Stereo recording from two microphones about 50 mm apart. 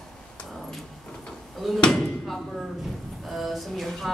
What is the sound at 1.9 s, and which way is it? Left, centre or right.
Speech, centre.